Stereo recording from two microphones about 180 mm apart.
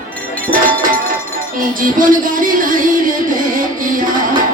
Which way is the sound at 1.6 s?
50° right (ahead or behind).